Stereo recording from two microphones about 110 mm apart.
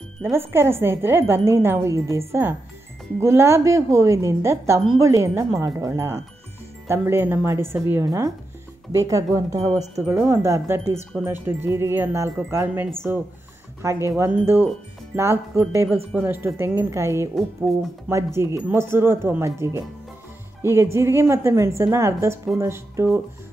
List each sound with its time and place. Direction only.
0.2 s speech: 20° right (ahead or behind)
17.7 s speech: centre (ahead or behind)
18.1 s speech: 25° right (ahead or behind)